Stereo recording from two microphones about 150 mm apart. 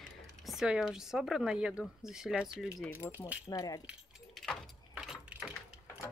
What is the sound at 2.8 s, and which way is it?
Speech, 15° left (ahead or behind).